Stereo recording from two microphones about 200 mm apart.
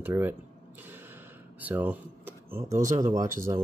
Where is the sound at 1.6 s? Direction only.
10° right (ahead or behind).